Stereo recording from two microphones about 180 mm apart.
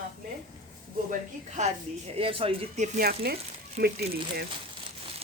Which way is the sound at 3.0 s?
60° right (ahead or behind).